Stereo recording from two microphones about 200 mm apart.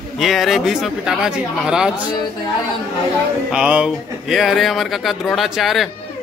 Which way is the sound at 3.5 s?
5° right (ahead or behind).